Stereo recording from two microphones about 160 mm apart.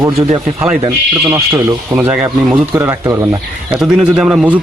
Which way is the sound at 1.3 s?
15° right (ahead or behind).